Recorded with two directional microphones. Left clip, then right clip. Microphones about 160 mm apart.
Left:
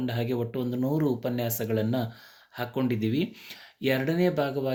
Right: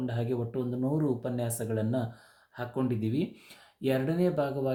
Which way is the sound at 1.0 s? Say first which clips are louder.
Left 3 dB; 10° left (ahead or behind).